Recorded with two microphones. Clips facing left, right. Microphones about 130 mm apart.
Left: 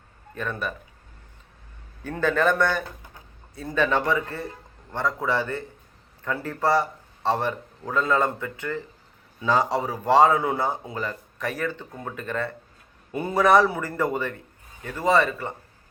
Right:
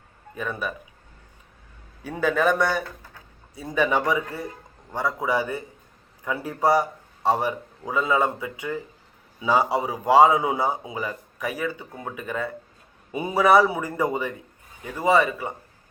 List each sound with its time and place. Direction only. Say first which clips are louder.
0.3 s speech: even; 10° right (ahead or behind)
2.0 s speech: even; 10° right (ahead or behind)
2.8 s a sound: right 1 dB; 20° left (ahead or behind)
3.5 s speech: right 1 dB; 10° right (ahead or behind)